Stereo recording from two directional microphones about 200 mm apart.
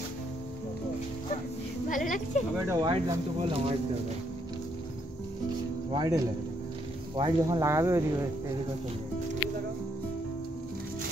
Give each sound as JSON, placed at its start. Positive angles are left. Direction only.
{"t": 1.9, "sound": "speech", "side_deg": 40}
{"t": 2.7, "sound": "speech", "side_deg": -20}
{"t": 5.9, "sound": "speech", "side_deg": -15}